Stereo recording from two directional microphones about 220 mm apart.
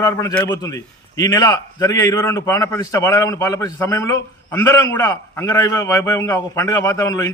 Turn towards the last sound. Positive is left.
turn(degrees=15)  # may be behind; listen again after turning